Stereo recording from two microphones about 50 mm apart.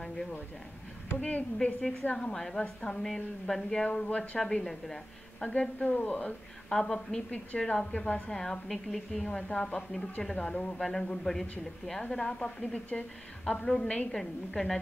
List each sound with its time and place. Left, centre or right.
1.2 s a woman's voice: left
2.3 s a woman's voice: centre
3.8 s a woman's voice: left
5.4 s a woman's voice: left
6.7 s a woman's voice: centre
7.2 s a woman's voice: left; by 9.2 s centre
9.2 s a woman's voice: centre